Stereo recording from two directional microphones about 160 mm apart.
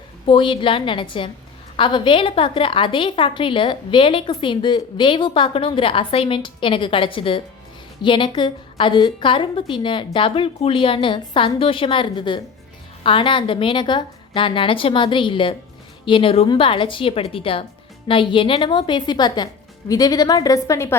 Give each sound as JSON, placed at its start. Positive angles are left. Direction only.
{"t": 0.3, "sound": "a woman's voice", "side_deg": 30}